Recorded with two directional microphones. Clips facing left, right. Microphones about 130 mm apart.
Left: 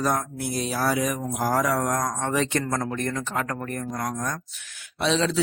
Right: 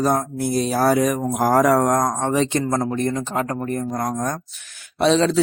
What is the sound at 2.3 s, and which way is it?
Speech, 25° right (ahead or behind).